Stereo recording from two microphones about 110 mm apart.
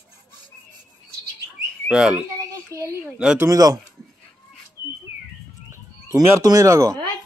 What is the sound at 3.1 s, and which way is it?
Speech, 10° right (ahead or behind).